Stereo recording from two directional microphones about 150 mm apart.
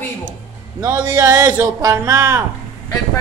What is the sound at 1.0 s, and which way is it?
Speech, 25° right (ahead or behind).